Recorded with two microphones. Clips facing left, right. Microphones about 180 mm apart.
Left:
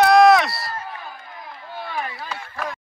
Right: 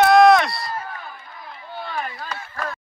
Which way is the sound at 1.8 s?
5° left (ahead or behind).